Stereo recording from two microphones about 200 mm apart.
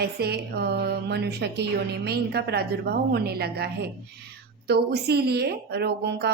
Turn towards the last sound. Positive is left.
turn(degrees=-55)  # may be behind; listen again after turning